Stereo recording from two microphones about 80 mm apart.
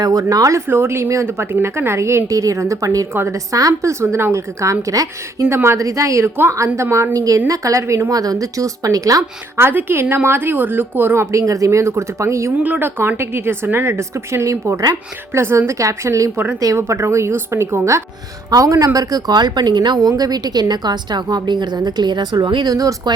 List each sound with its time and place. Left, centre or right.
0.0 s a woman's voice: right
0.7 s a woman's voice: right
9.6 s a woman's voice: right
12.6 s a woman's voice: centre
13.0 s a woman's voice: right
15.3 s a woman's voice: right
18.9 s a woman's voice: right
22.7 s a woman's voice: right